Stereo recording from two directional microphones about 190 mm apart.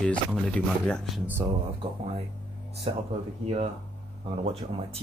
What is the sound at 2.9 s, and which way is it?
Speech, 30° right (ahead or behind).